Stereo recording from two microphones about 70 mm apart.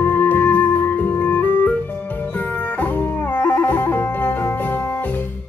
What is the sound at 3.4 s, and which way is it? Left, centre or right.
Music, left.